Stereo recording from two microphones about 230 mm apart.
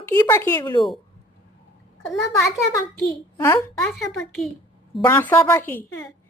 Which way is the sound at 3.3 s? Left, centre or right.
Centre.